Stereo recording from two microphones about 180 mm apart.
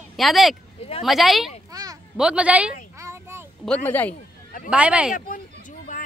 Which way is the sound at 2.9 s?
15° right (ahead or behind).